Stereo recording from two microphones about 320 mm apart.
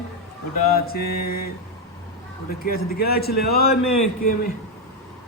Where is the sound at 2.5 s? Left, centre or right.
Left.